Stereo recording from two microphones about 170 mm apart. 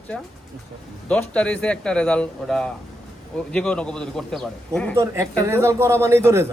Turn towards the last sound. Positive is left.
turn(degrees=-15)  # may be behind; listen again after turning